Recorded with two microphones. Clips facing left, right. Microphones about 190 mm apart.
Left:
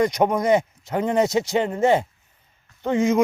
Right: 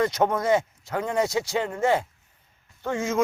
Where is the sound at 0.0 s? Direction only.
15° left (ahead or behind).